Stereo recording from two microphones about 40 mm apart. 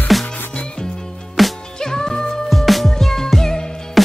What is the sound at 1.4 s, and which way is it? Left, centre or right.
Music, centre.